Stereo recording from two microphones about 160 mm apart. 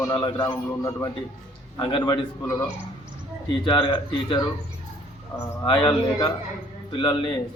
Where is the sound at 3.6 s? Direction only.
30° left (ahead or behind).